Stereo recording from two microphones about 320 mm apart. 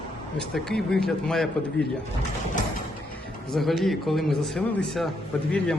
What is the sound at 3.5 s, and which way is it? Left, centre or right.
Speech, centre.